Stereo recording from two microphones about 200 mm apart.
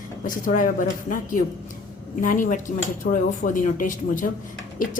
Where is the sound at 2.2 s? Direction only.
40° left (ahead or behind).